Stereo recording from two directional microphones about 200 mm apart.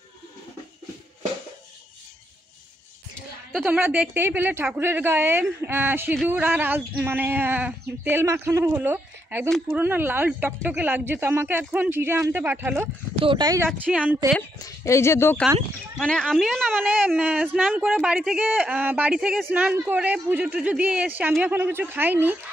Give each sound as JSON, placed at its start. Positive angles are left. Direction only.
{"t": 3.5, "sound": "speech", "side_deg": -5}
{"t": 13.2, "sound": "speech", "side_deg": -20}
{"t": 13.7, "sound": "speech", "side_deg": -5}
{"t": 14.6, "sound": "a woman's voice", "side_deg": 15}